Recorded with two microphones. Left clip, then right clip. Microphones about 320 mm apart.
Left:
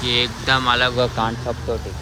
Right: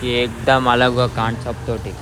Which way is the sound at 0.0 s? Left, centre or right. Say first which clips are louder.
Right 1 dB; centre.